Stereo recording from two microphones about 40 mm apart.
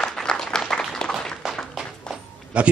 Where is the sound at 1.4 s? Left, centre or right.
Centre.